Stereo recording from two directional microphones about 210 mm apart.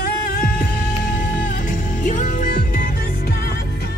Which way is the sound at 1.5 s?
40° left (ahead or behind).